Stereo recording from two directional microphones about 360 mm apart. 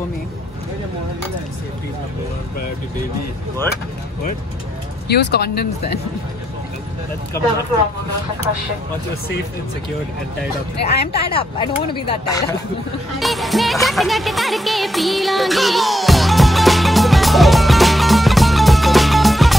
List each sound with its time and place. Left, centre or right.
5.0 s speech: left
10.9 s speech: left
11.2 s speech: centre
13.2 s music: centre